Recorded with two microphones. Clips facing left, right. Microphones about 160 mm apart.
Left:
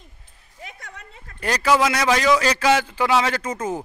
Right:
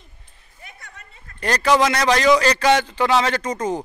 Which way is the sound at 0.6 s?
85° left.